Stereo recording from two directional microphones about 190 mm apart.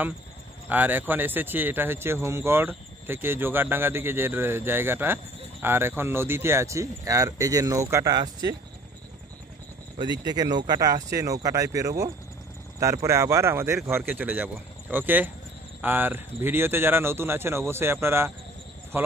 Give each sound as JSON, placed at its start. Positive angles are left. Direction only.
{"t": 0.7, "sound": "speech", "side_deg": -10}
{"t": 9.9, "sound": "speech", "side_deg": -25}